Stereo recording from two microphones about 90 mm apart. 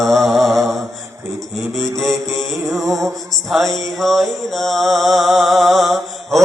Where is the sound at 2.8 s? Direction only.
35° right (ahead or behind).